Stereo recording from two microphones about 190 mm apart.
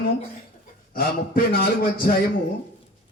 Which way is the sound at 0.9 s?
50° left (ahead or behind).